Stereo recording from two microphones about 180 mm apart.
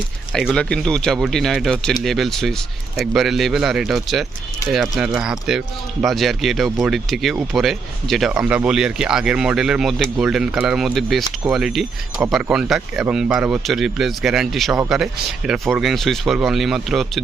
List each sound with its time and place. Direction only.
0.3 s speech: 5° left (ahead or behind)